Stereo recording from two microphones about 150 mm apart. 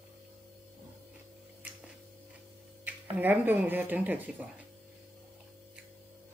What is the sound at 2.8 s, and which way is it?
Speech, 10° right (ahead or behind).